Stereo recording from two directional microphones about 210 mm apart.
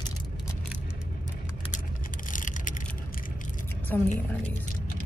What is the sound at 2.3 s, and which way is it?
Vehicle, 40° left (ahead or behind).